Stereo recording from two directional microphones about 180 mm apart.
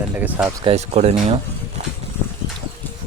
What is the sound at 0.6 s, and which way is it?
Speech, 35° right (ahead or behind).